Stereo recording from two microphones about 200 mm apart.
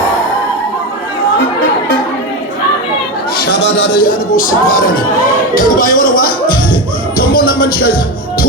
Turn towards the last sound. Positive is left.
turn(degrees=45)  # may be behind; listen again after turning